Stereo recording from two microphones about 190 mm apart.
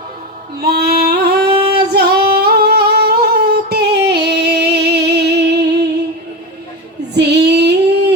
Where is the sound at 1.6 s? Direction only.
55° right (ahead or behind).